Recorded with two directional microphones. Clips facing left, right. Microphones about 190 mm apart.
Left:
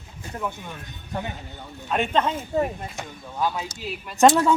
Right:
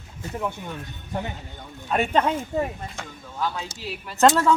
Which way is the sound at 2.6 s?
15° left (ahead or behind).